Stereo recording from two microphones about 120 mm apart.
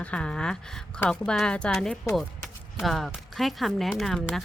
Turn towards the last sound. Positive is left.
turn(degrees=0)  # may be behind; listen again after turning